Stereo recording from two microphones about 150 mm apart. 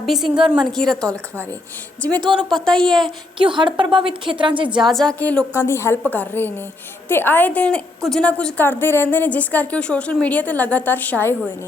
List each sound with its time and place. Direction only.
0.0 s a woman's voice: centre (ahead or behind)
3.3 s a woman's voice: 35° right (ahead or behind)
4.8 s a woman's voice: centre (ahead or behind)